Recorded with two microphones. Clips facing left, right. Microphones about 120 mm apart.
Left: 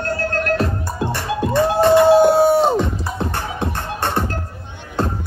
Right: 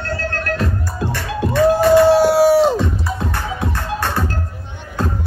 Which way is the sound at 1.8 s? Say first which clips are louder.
Left 1 dB; 25° left (ahead or behind).